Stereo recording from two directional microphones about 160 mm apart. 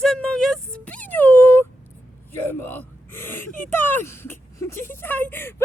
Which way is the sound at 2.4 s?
10° left (ahead or behind).